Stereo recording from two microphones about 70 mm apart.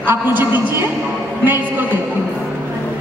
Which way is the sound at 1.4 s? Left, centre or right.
Right.